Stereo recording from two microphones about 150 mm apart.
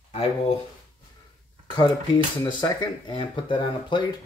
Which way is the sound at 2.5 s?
30° left (ahead or behind).